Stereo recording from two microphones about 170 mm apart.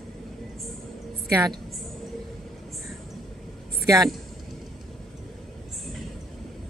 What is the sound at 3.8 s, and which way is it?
Speech, 20° right (ahead or behind).